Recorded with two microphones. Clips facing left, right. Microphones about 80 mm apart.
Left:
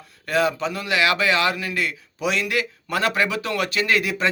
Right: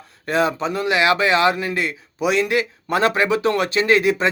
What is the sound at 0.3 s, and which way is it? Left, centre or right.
A man's voice, right.